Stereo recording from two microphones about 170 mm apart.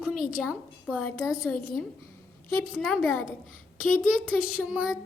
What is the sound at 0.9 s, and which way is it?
Speech, 5° left (ahead or behind).